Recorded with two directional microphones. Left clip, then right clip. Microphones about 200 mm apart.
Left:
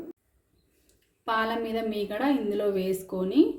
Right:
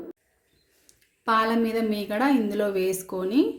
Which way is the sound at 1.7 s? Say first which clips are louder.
Right 3 dB; 30° right (ahead or behind).